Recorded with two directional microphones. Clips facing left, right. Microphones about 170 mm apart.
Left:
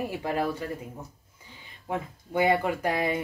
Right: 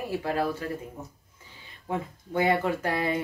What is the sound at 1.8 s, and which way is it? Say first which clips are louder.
Speech: right 1 dB; 15° left (ahead or behind).